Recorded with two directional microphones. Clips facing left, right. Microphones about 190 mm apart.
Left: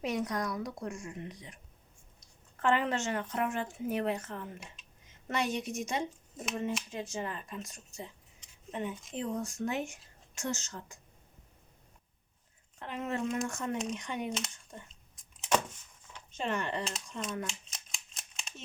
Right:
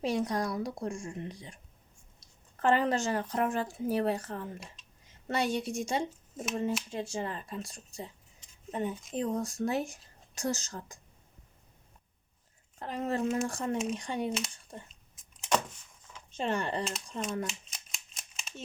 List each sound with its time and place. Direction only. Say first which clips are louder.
0.0 s a woman's voice: right 3 dB; 30° right (ahead or behind)
12.8 s speech: right 3 dB; 35° right (ahead or behind)
15.1 s vehicle: even; 5° left (ahead or behind)
16.4 s speech: right 2 dB; 35° right (ahead or behind)
17.4 s a sound: right 3 dB; centre (ahead or behind)